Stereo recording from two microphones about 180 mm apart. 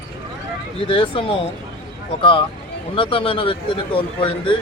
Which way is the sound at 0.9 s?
30° left (ahead or behind).